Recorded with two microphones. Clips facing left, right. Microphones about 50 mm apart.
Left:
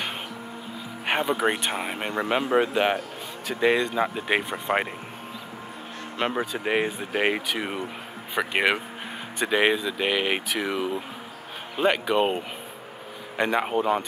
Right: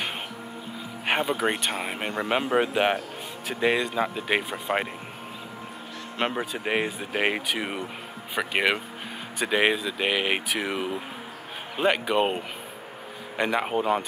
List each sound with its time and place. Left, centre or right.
1.0 s a sound: centre
1.3 s speech: centre
6.2 s speech: right
6.6 s speech: centre
8.4 s speech: centre